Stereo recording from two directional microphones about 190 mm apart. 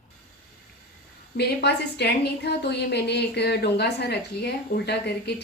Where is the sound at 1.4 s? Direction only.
60° left (ahead or behind).